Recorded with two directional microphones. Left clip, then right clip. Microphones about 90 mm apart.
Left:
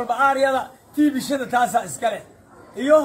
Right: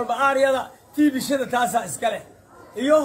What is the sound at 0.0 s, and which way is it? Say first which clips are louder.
A man's voice: left 1 dB; 30° right (ahead or behind).